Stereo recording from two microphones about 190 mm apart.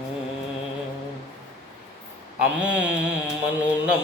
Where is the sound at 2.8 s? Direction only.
5° right (ahead or behind).